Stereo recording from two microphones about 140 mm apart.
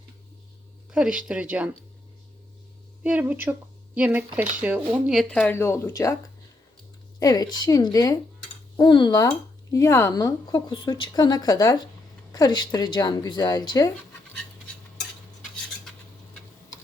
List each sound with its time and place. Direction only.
0.9 s speech: 5° right (ahead or behind)
3.0 s speech: 10° right (ahead or behind)
5.3 s speech: 5° left (ahead or behind)
5.5 s speech: 20° left (ahead or behind)
7.2 s speech: 25° left (ahead or behind)